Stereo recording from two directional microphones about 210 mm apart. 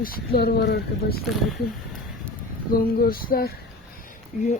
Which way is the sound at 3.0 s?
45° left (ahead or behind).